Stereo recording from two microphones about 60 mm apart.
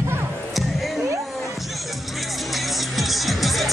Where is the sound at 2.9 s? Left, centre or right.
Centre.